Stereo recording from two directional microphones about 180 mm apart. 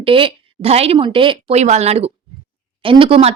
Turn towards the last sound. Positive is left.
turn(degrees=-35)  # may be behind; listen again after turning